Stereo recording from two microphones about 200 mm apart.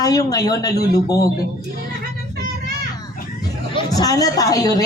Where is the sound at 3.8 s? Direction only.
20° left (ahead or behind).